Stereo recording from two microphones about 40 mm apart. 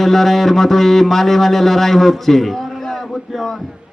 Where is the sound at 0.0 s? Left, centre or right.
Centre.